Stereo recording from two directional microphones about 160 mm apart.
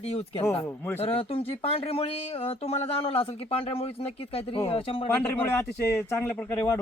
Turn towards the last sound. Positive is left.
turn(degrees=15)  # may be behind; listen again after turning